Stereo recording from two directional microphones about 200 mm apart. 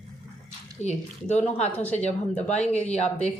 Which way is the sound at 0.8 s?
35° left (ahead or behind).